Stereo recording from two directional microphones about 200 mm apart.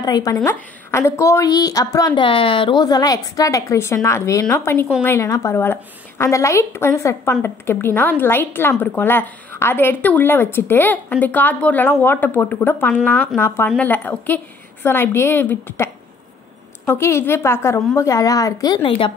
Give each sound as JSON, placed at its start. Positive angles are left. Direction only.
{"t": 0.0, "sound": "a woman's voice", "side_deg": 20}